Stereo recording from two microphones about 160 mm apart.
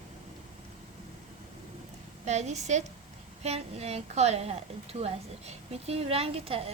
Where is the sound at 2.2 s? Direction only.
45° right (ahead or behind).